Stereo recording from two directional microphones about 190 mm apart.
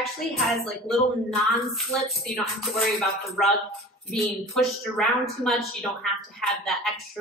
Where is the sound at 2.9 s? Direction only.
Centre (ahead or behind).